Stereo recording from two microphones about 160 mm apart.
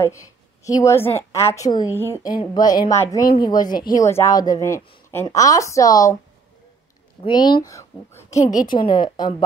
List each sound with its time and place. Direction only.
0.0 s a woman's voice: 20° left (ahead or behind)
7.2 s speech: 30° left (ahead or behind)
8.6 s speech: 30° left (ahead or behind)